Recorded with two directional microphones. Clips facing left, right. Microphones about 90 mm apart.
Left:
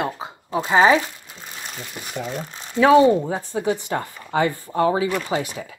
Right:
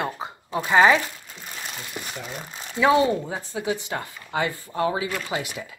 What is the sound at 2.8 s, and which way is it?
Speech, 30° left (ahead or behind).